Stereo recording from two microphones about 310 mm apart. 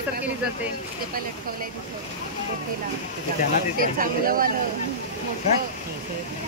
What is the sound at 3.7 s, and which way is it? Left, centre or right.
Speech, right.